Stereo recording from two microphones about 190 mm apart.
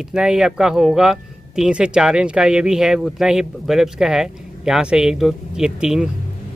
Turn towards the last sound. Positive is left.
turn(degrees=-5)  # may be behind; listen again after turning